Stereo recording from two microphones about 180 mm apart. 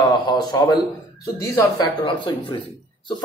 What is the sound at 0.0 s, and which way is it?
A man's voice, 25° left (ahead or behind).